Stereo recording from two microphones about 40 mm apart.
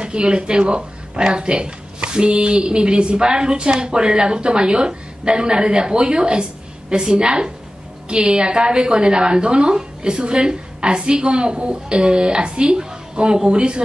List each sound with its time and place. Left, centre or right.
0.0 s speech: right